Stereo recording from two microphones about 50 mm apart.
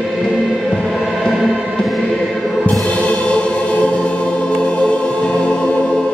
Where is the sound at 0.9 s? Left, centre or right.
Centre.